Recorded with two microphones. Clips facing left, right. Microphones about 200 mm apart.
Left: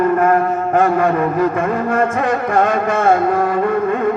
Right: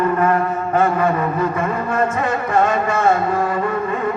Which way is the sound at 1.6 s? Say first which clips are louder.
Left 3 dB; 55° left (ahead or behind).